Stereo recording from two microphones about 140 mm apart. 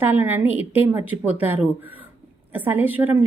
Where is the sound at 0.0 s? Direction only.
15° right (ahead or behind).